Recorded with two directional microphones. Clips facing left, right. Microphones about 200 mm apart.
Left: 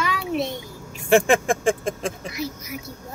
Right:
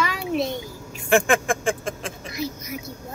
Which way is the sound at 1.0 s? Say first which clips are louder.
Left 2 dB; 35° left (ahead or behind).